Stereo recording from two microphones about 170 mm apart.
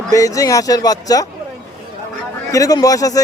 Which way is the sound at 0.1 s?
20° left (ahead or behind).